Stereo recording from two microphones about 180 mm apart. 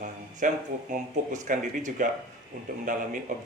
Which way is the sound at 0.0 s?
45° right (ahead or behind).